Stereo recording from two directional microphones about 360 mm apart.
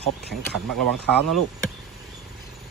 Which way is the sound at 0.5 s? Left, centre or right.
Right.